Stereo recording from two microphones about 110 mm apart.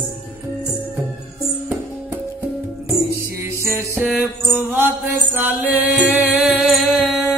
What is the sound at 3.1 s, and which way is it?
Music, 25° right (ahead or behind).